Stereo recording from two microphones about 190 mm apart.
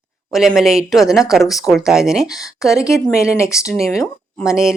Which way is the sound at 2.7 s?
15° left (ahead or behind).